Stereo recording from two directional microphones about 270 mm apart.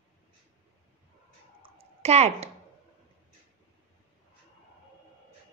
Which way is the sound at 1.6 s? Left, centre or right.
Right.